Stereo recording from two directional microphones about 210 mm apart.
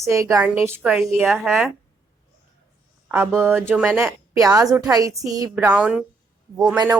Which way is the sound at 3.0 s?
10° right (ahead or behind).